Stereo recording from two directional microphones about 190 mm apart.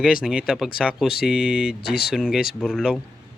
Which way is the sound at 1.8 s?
55° left (ahead or behind).